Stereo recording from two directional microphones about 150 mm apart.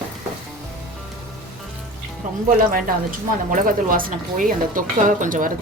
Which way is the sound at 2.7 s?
70° right (ahead or behind).